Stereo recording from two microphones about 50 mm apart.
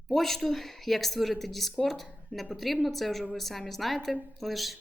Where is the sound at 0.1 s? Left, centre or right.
Centre.